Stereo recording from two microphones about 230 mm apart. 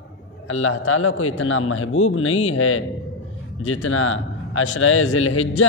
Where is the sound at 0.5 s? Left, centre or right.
Left.